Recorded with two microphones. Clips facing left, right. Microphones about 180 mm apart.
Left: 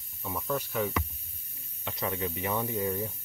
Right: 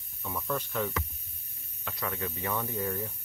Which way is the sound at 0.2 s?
15° left (ahead or behind).